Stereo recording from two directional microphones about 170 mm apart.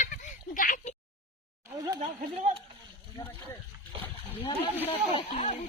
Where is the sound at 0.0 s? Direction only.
50° left (ahead or behind).